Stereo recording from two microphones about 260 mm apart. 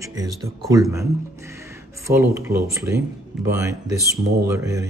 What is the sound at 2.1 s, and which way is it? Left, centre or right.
Speech, centre.